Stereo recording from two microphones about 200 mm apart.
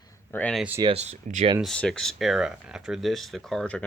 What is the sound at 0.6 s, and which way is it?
Speech, 10° right (ahead or behind).